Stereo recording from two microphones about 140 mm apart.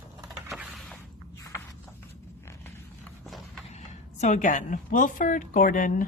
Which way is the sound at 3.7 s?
55° left (ahead or behind).